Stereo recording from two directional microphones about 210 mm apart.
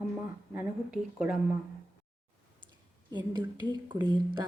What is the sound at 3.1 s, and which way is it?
A woman's voice, 20° right (ahead or behind).